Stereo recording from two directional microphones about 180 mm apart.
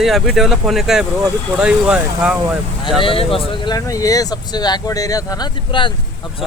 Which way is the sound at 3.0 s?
30° left (ahead or behind).